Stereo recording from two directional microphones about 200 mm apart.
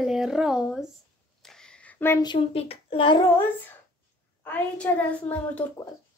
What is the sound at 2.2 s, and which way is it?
Speech, 25° left (ahead or behind).